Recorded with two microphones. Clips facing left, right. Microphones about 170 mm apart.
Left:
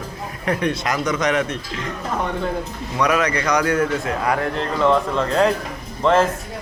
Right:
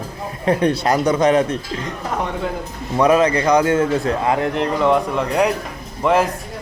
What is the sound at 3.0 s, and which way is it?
A man's voice, 30° right (ahead or behind).